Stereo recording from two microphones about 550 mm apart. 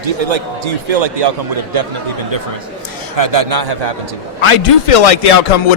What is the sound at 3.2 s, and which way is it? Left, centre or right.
Speech, right.